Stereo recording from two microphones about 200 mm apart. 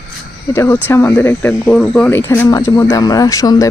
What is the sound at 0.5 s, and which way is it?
Speech, 15° left (ahead or behind).